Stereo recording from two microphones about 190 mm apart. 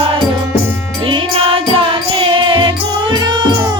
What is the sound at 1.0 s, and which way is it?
Music, 30° right (ahead or behind).